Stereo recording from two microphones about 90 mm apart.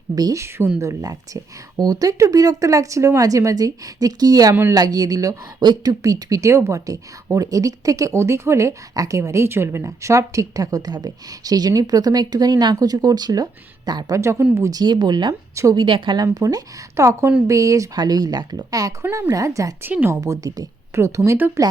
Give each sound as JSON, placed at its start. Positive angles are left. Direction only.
{"t": 0.2, "sound": "speech", "side_deg": -45}
{"t": 0.4, "sound": "a woman's voice", "side_deg": -30}
{"t": 14.2, "sound": "speech", "side_deg": -30}
{"t": 14.7, "sound": "speech", "side_deg": -50}
{"t": 15.3, "sound": "a woman's voice", "side_deg": -35}
{"t": 15.7, "sound": "speech", "side_deg": -60}
{"t": 16.2, "sound": "speech", "side_deg": -40}
{"t": 19.8, "sound": "a woman's voice", "side_deg": -20}
{"t": 20.2, "sound": "speech", "side_deg": -40}
{"t": 21.3, "sound": "a woman's voice", "side_deg": -20}